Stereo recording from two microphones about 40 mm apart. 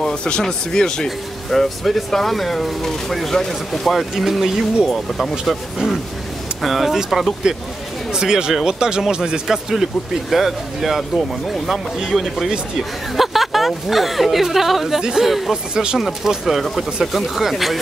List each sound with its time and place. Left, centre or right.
0.0 s speech: left
1.0 s speech: centre
3.9 s speech: centre
6.6 s speech: centre
8.1 s speech: centre
15.0 s speech: centre
15.2 s speech: centre
15.5 s speech: centre
16.0 s speech: centre
16.6 s speech: centre